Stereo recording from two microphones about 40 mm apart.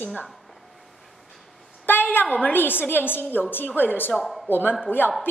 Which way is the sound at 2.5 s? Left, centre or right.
Left.